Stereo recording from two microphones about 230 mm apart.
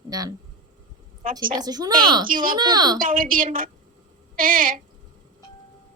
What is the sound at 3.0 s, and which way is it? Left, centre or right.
A woman's voice, right.